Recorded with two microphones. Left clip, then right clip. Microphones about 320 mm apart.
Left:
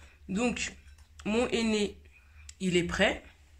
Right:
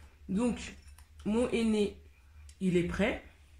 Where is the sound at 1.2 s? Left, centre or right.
Left.